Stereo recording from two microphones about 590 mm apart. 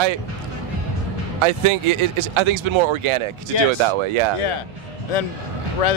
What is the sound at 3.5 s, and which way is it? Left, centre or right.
Speech, left.